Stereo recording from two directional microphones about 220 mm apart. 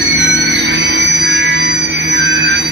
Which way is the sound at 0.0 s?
55° right (ahead or behind).